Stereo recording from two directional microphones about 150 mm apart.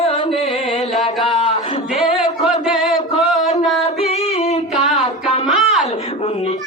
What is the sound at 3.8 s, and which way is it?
Singing, 45° left (ahead or behind).